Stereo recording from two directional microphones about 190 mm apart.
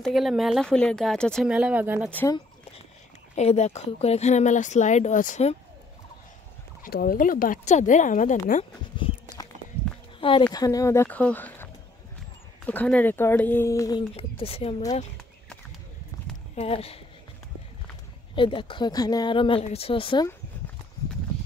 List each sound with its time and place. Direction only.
0.0 s speech: centre (ahead or behind)
2.1 s speech: 15° left (ahead or behind)
3.3 s speech: 35° left (ahead or behind)
6.8 s speech: 50° left (ahead or behind)
8.9 s a sound: 25° left (ahead or behind)
10.5 s speech: 20° left (ahead or behind)
14.1 s speech: 30° left (ahead or behind)
16.5 s speech: 30° left (ahead or behind)
18.3 s speech: 25° left (ahead or behind)